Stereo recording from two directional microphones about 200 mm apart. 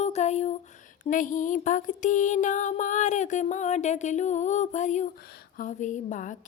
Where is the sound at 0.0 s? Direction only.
35° left (ahead or behind).